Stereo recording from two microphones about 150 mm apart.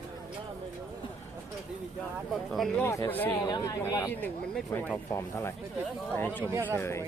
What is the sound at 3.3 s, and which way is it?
Speech, 30° left (ahead or behind).